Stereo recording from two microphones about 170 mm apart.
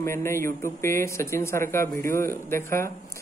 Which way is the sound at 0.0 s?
15° left (ahead or behind).